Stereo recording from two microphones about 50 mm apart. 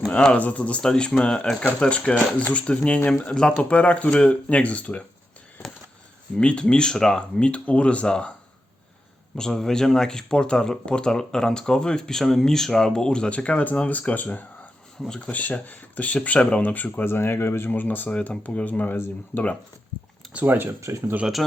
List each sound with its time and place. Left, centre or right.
0.1 s speech: centre
0.3 s speech: left
0.8 s speech: centre
6.3 s speech: left
9.3 s speech: centre; by 18.9 s left
18.9 s speech: left
20.4 s speech: right